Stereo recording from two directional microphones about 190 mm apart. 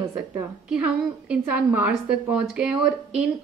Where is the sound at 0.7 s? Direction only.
5° right (ahead or behind).